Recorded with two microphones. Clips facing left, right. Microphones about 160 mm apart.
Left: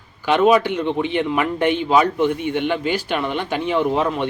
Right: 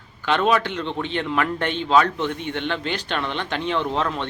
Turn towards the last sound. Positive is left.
turn(degrees=10)  # may be behind; listen again after turning